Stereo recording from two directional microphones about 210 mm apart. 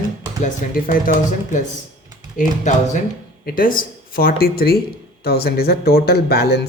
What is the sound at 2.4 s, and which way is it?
Speech, 40° left (ahead or behind).